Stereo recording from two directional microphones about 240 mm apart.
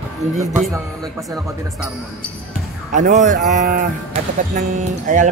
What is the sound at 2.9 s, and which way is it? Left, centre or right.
Speech, right.